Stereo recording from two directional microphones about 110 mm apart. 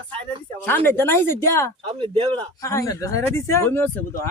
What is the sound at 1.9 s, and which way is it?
Speech, 50° right (ahead or behind).